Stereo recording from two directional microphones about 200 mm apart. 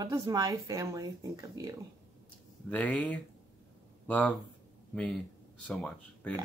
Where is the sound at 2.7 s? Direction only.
5° left (ahead or behind).